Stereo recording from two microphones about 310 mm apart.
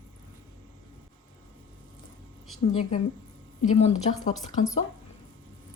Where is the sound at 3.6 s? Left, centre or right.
Left.